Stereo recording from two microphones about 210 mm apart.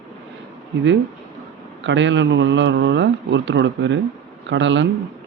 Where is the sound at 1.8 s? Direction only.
60° right (ahead or behind).